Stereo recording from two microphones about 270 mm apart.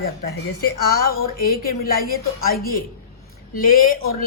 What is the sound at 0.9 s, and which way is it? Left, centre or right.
A woman's voice, left.